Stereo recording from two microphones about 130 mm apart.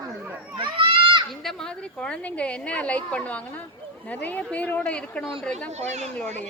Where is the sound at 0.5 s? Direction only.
40° right (ahead or behind).